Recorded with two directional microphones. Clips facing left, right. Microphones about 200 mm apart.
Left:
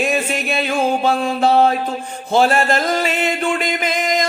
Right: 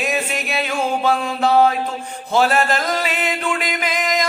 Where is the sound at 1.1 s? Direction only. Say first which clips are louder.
Left 2 dB; 40° left (ahead or behind).